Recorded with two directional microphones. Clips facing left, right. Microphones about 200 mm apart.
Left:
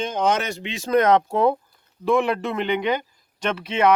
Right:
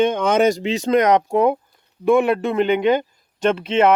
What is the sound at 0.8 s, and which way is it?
Speech, 15° right (ahead or behind).